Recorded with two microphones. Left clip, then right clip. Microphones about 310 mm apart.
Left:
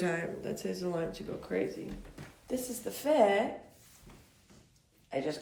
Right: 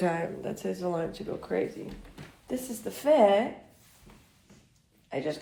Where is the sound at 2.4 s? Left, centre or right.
Right.